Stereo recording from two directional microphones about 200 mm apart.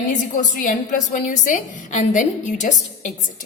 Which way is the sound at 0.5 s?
45° left (ahead or behind).